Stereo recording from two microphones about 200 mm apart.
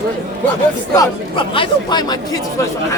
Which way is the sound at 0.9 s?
25° left (ahead or behind).